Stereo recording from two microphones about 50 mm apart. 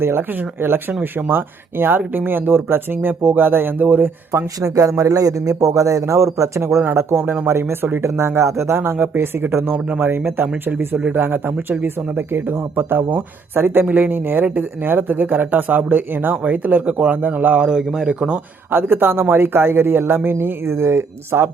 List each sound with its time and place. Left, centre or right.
0.0 s speech: right
4.6 s a man's voice: right
6.8 s speech: right
8.4 s speech: right
13.8 s speech: right
17.6 s speech: centre
18.7 s speech: right